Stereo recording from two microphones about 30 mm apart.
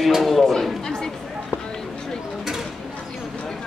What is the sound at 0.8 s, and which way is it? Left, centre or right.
Chatter, centre.